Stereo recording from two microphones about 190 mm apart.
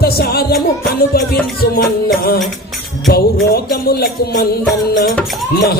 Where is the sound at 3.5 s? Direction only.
50° left (ahead or behind).